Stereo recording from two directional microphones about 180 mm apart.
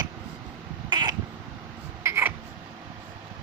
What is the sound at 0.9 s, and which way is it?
Crow, 25° right (ahead or behind).